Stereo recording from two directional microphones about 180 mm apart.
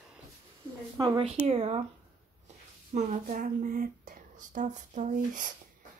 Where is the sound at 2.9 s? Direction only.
45° right (ahead or behind).